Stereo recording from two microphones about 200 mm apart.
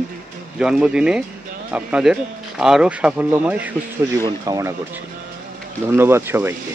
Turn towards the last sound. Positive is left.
turn(degrees=-10)  # may be behind; listen again after turning